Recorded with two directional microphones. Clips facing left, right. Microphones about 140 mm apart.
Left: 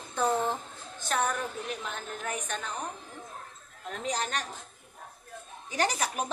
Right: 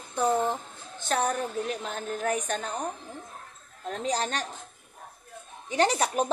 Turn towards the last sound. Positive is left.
turn(degrees=-30)  # may be behind; listen again after turning